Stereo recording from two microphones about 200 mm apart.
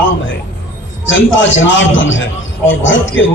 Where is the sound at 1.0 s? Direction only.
70° left (ahead or behind).